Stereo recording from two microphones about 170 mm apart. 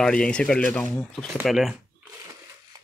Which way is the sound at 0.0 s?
5° left (ahead or behind).